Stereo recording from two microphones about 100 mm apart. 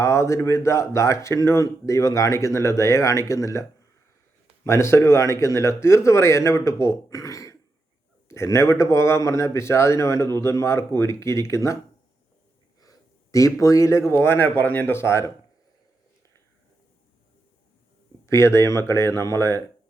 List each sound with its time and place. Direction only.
0.0 s a man's voice: 30° left (ahead or behind)
12.8 s a sound: 35° left (ahead or behind)
14.1 s a man's voice: 25° left (ahead or behind)
18.3 s a man's voice: 30° left (ahead or behind)